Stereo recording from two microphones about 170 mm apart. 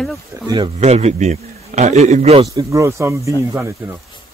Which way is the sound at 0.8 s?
40° right (ahead or behind).